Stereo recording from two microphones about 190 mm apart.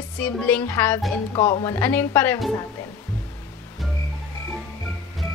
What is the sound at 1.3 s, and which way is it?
Speech, 25° left (ahead or behind).